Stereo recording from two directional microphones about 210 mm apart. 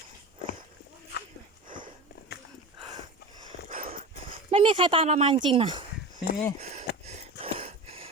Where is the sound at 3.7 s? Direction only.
35° right (ahead or behind).